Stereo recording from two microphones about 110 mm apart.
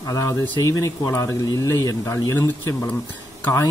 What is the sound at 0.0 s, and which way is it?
Speech, 30° left (ahead or behind).